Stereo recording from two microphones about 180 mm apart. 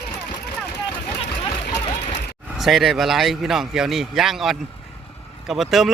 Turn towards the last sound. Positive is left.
turn(degrees=0)  # may be behind; listen again after turning